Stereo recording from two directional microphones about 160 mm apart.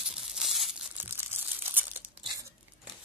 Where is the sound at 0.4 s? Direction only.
Centre (ahead or behind).